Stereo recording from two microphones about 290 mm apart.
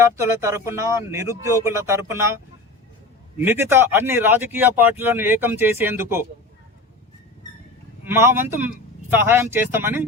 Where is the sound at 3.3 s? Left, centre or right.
Centre.